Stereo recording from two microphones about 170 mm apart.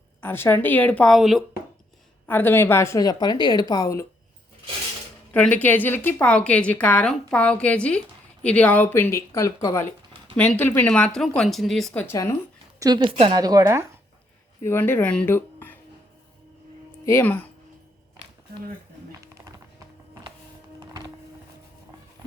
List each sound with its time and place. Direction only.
0.2 s a woman's voice: 15° left (ahead or behind)
2.2 s a woman's voice: 10° left (ahead or behind)
5.3 s a woman's voice: 10° left (ahead or behind)
11.9 s a woman's voice: 15° left (ahead or behind)
12.8 s a woman's voice: 25° right (ahead or behind)
14.6 s speech: 15° left (ahead or behind)
17.1 s a woman's voice: 15° left (ahead or behind)